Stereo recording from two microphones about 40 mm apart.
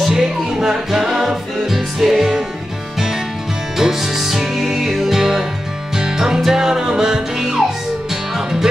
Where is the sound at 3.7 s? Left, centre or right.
Centre.